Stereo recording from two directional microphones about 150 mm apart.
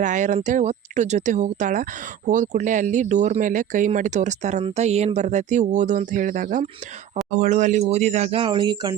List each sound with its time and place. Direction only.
0.0 s speech: 55° right (ahead or behind); by 9.0 s 30° right (ahead or behind)